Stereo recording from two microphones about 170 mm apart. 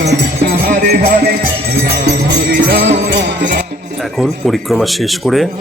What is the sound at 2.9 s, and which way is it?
Music, 90° right.